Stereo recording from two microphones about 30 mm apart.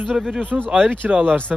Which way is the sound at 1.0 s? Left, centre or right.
Right.